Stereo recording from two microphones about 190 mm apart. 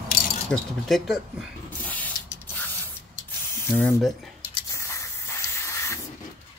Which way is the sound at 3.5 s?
10° left (ahead or behind).